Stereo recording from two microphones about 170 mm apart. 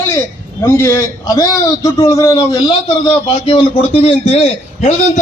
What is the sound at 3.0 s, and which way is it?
A man's voice, 30° left (ahead or behind).